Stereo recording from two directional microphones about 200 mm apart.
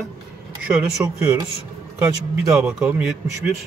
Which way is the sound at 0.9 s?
15° right (ahead or behind).